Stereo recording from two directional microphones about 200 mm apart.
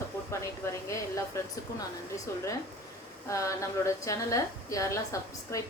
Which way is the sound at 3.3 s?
15° left (ahead or behind).